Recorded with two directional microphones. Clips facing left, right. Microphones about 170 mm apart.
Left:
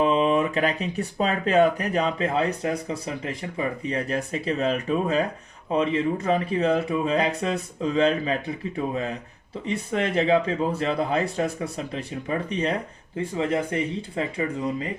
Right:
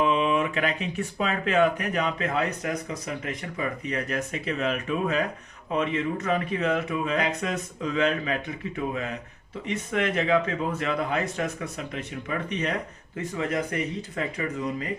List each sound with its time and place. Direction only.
0.0 s speech: 35° left (ahead or behind)
9.6 s speech: 30° left (ahead or behind)